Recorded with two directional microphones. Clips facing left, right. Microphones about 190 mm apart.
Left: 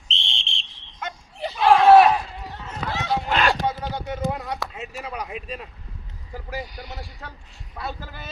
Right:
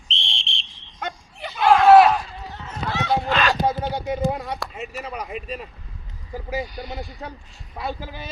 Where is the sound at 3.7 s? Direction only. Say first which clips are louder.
Right 4 dB; 25° right (ahead or behind).